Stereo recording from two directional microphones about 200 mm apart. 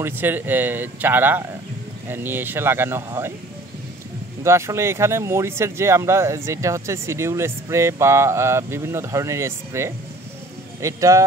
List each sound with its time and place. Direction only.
0.0 s speech: 10° right (ahead or behind)
4.4 s speech: 15° right (ahead or behind)